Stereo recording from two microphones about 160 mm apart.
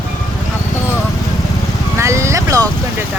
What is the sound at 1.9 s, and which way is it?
Speech, 20° right (ahead or behind).